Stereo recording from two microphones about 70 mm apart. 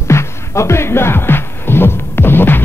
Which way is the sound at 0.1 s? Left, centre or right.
Left.